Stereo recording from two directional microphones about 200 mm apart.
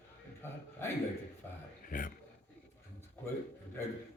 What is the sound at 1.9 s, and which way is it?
Speech, 45° left (ahead or behind).